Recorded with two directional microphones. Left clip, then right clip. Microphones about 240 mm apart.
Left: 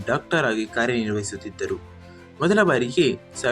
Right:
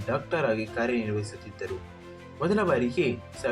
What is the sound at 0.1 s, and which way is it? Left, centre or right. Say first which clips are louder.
Speech: left 5 dB; left.